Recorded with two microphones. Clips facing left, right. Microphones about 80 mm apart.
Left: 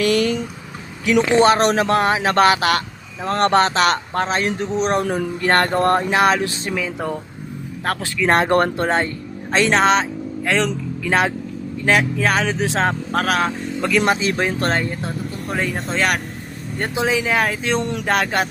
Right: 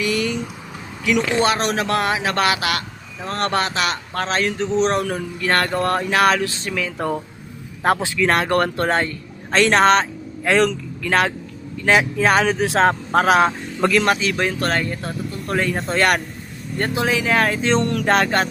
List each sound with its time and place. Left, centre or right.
0.0 s a sound: left
1.0 s speech: left
4.3 s speech: left
4.6 s speech: centre
4.9 s speech: left
7.9 s a man's voice: centre
8.3 s speech: left
9.5 s speech: centre
10.7 s speech: centre
11.9 s speech: centre
13.2 s a man's voice: centre
14.0 s speech: left
15.4 s speech: centre
16.9 s speech: centre